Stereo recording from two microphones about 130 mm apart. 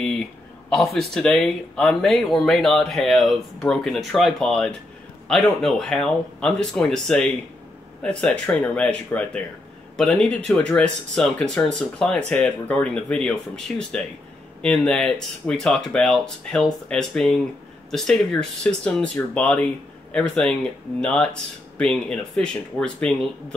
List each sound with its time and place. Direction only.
0.7 s speech: centre (ahead or behind)